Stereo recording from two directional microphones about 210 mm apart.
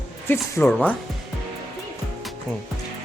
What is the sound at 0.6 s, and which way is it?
Speech, 5° left (ahead or behind).